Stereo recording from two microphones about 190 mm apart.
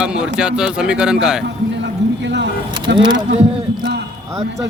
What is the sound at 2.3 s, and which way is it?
Vehicle, 65° right (ahead or behind).